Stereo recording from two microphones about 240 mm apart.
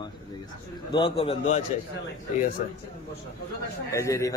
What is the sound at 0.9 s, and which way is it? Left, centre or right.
Speech, left.